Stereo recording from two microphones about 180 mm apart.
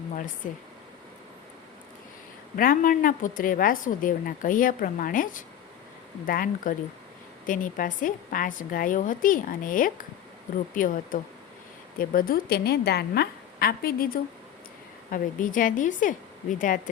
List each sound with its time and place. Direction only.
2.6 s a woman's voice: 50° left (ahead or behind)